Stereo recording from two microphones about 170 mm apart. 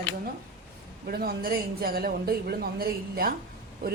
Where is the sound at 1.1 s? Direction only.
65° right (ahead or behind).